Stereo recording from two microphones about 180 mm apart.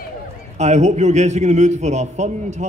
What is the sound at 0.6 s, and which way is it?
A man's voice, 40° right (ahead or behind).